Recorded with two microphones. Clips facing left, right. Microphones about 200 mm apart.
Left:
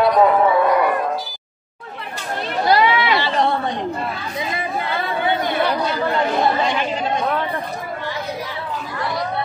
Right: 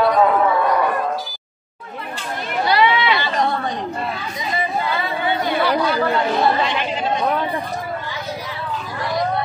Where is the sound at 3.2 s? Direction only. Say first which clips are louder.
Left 2 dB; 30° left (ahead or behind).